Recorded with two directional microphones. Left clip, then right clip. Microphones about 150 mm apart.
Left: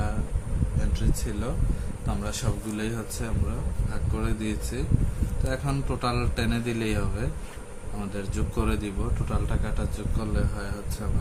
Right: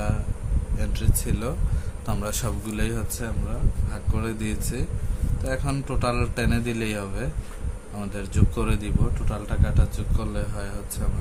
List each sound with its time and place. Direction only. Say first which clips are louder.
0.8 s a man's voice: right 2 dB; 55° right (ahead or behind)